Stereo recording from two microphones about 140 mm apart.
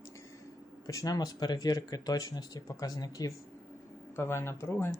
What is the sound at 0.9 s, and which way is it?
Speech, 25° left (ahead or behind).